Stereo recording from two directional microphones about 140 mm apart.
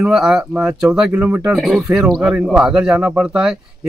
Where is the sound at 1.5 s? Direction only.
Centre (ahead or behind).